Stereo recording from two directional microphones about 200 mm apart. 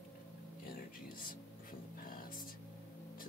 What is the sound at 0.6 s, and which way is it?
Music, 45° left (ahead or behind).